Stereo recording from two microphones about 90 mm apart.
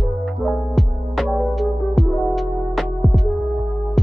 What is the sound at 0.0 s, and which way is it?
Music, centre (ahead or behind).